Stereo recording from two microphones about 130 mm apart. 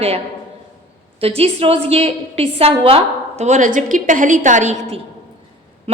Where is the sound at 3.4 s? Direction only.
75° right (ahead or behind).